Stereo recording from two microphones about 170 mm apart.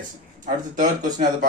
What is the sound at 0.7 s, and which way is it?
Speech, 50° right (ahead or behind).